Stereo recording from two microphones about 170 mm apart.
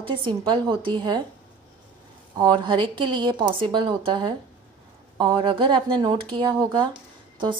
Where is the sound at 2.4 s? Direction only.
25° right (ahead or behind).